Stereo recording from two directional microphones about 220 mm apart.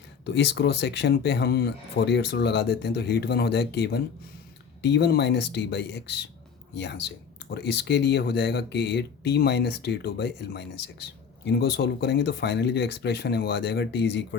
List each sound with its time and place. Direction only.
0.3 s speech: 50° left (ahead or behind)